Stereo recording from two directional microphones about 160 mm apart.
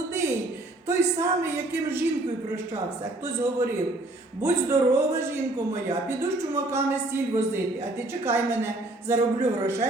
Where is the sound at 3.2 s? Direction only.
15° right (ahead or behind).